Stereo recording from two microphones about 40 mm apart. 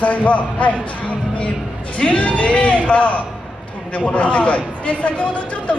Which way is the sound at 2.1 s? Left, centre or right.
Left.